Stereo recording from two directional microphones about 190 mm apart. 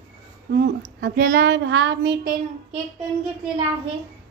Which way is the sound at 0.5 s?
60° right (ahead or behind).